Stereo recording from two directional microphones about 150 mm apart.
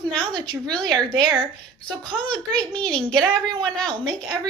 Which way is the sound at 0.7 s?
30° right (ahead or behind).